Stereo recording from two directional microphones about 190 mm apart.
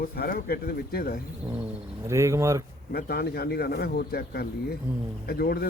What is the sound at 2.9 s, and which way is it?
Speech, 55° left (ahead or behind).